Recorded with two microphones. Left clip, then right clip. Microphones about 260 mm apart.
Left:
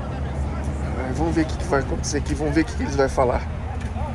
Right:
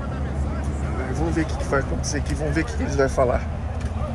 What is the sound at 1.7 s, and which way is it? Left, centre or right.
Speech, centre.